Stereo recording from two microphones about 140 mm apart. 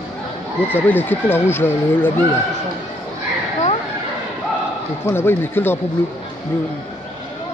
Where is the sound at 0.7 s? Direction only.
15° left (ahead or behind).